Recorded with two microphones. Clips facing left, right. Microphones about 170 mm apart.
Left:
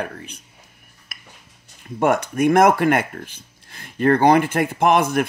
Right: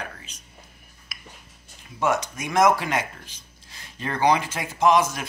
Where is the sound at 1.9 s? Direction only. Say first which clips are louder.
Left 6 dB; 55° left (ahead or behind).